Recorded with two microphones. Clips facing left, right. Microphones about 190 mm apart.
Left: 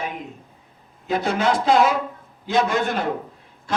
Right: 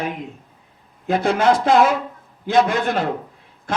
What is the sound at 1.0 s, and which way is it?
A man's voice, 50° right (ahead or behind).